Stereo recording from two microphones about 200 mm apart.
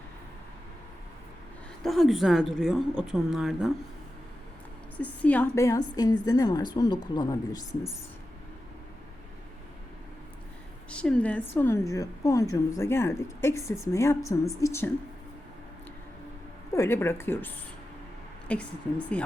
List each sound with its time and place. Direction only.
1.8 s a woman's voice: centre (ahead or behind)
4.9 s a woman's voice: 5° left (ahead or behind)
10.9 s a woman's voice: 5° left (ahead or behind)
16.7 s a woman's voice: 15° left (ahead or behind)